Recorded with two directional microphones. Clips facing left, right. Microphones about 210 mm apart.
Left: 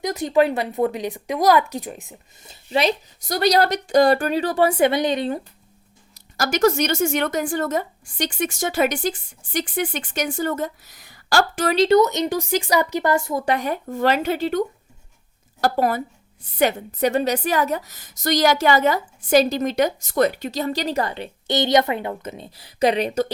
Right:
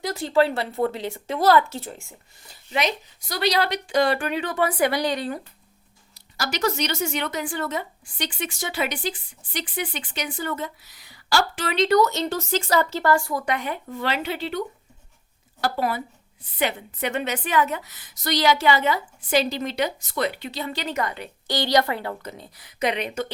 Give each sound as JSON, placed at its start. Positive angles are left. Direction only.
{"t": 0.0, "sound": "speech", "side_deg": 20}
{"t": 3.2, "sound": "speech", "side_deg": 45}
{"t": 6.1, "sound": "a woman's voice", "side_deg": 45}
{"t": 11.9, "sound": "speech", "side_deg": 20}
{"t": 15.6, "sound": "a woman's voice", "side_deg": 45}